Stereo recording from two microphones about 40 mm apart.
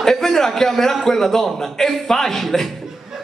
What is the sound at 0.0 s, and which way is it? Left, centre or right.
A man's voice, centre.